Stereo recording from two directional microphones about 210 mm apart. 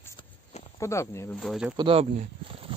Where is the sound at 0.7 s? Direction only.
15° left (ahead or behind).